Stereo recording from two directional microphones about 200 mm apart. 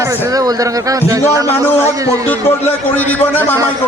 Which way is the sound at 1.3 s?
15° right (ahead or behind).